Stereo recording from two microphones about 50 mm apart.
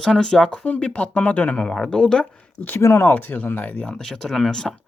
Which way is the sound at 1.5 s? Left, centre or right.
Centre.